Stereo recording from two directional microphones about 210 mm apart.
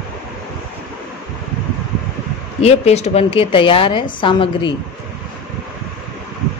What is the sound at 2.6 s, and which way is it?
Speech, 30° left (ahead or behind).